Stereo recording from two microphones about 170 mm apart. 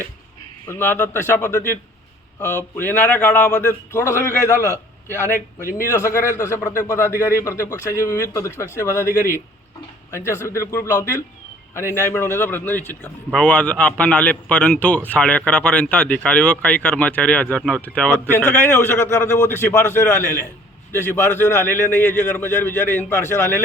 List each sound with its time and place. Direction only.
0.7 s a man's voice: 10° left (ahead or behind)
4.5 s a man's voice: 15° right (ahead or behind)
5.7 s a man's voice: 15° left (ahead or behind)